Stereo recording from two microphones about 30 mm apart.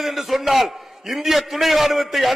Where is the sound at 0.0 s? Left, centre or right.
Centre.